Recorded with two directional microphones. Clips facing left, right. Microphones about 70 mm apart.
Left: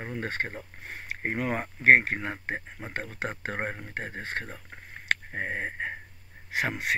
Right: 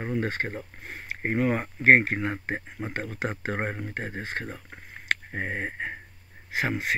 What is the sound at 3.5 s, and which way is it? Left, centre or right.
Speech, right.